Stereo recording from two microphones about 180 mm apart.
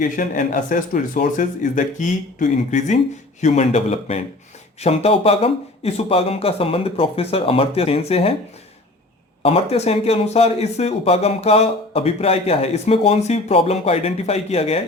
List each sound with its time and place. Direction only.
0.0 s speech: 45° left (ahead or behind)
9.4 s speech: 35° left (ahead or behind)